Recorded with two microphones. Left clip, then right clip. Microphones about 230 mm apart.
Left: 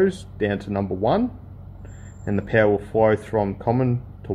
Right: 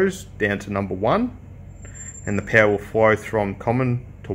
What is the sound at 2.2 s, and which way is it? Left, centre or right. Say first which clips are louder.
Speech: right 2 dB; centre.